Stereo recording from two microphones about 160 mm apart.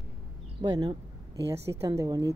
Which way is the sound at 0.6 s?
25° right (ahead or behind).